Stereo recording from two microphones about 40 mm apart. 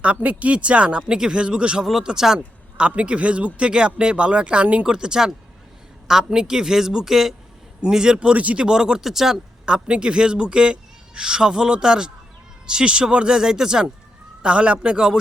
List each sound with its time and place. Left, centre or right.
0.0 s a man's voice: right
1.8 s speech: centre
2.7 s a man's voice: right
4.9 s a man's voice: right
7.8 s a man's voice: centre
8.4 s speech: right
8.6 s speech: centre
9.0 s speech: centre
9.6 s a man's voice: right
13.3 s speech: centre
14.4 s a man's voice: right